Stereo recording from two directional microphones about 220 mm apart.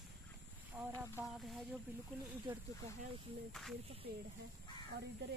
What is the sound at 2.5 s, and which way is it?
Speech, 20° right (ahead or behind).